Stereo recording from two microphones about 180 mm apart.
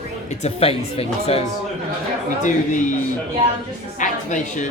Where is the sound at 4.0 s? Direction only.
45° left (ahead or behind).